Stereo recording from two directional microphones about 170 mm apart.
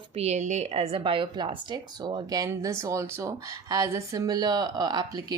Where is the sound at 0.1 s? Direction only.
40° right (ahead or behind).